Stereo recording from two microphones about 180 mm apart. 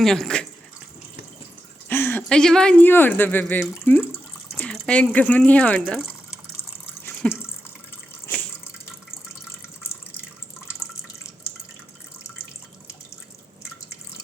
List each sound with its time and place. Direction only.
0.0 s speech: 5° left (ahead or behind)
1.9 s speech: 10° left (ahead or behind)
7.2 s speech: 5° left (ahead or behind)